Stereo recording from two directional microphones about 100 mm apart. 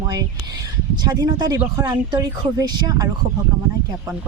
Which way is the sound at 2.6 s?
40° right (ahead or behind).